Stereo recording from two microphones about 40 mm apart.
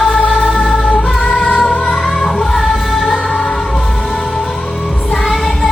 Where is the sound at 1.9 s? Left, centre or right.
Centre.